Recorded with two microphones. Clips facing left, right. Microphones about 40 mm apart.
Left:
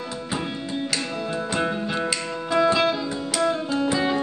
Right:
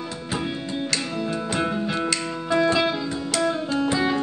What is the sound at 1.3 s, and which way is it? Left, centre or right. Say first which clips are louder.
Music: left 1 dB; centre.